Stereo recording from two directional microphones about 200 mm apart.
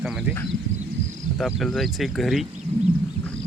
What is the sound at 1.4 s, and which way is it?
Speech, centre (ahead or behind).